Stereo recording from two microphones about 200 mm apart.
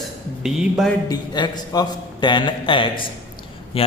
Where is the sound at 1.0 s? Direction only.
20° left (ahead or behind).